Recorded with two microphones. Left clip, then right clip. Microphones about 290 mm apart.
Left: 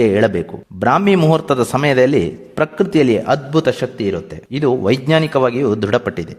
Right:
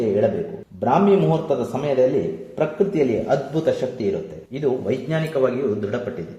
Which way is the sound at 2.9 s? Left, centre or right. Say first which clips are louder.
Left 9 dB; left.